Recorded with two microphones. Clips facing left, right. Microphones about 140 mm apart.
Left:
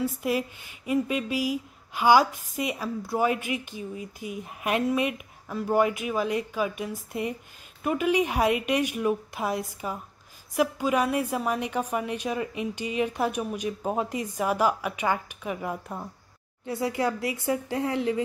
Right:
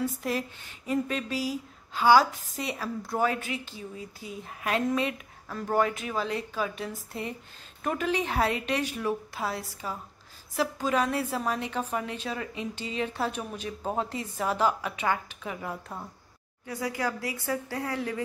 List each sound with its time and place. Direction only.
0.0 s a woman's voice: 10° left (ahead or behind)
16.6 s a woman's voice: 25° left (ahead or behind)